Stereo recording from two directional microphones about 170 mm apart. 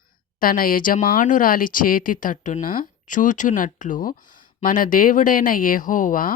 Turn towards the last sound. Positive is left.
turn(degrees=50)  # may be behind; listen again after turning